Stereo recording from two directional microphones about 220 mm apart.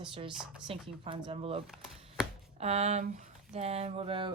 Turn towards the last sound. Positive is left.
turn(degrees=-25)  # may be behind; listen again after turning